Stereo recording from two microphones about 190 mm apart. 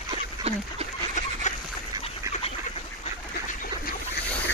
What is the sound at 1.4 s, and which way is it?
Duck, 40° left (ahead or behind).